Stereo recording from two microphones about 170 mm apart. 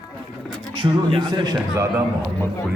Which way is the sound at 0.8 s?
30° right (ahead or behind).